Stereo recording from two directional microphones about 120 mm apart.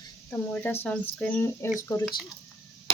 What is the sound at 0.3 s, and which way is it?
Speech, 15° left (ahead or behind).